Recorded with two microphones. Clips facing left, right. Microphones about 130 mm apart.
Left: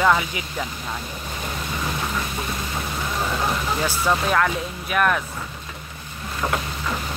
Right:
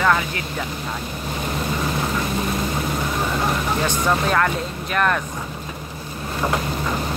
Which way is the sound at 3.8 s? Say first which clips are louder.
Even; 5° left (ahead or behind).